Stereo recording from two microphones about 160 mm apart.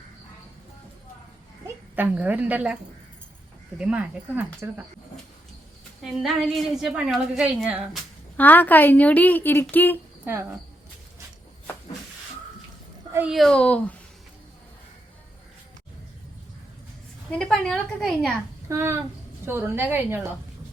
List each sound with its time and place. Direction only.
1.6 s a woman's voice: 10° right (ahead or behind)
3.8 s speech: 5° right (ahead or behind)
6.0 s a woman's voice: centre (ahead or behind)
8.4 s a woman's voice: 10° left (ahead or behind)
13.1 s a woman's voice: 5° right (ahead or behind)
17.3 s a woman's voice: 5° left (ahead or behind)
18.7 s speech: 15° right (ahead or behind)